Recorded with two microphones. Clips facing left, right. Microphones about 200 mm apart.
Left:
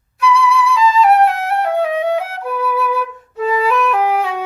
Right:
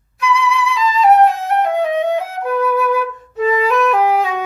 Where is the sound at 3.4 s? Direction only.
10° left (ahead or behind).